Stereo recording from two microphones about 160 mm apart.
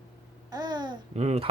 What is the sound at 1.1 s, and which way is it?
Babbling, 40° right (ahead or behind).